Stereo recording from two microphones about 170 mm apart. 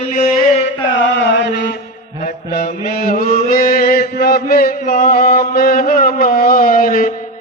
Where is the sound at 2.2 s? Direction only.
70° left (ahead or behind).